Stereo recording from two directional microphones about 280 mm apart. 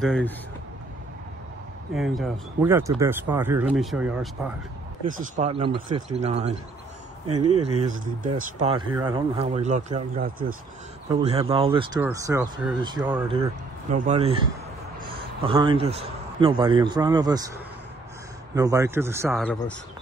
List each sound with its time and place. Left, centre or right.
0.0 s speech: centre
2.0 s speech: centre
5.2 s speech: right
7.9 s speech: right
8.5 s a man's voice: centre
13.3 s speech: right
15.4 s a man's voice: centre
18.5 s a man's voice: centre